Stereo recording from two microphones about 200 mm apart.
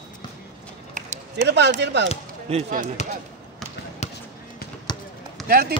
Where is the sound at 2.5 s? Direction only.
40° right (ahead or behind).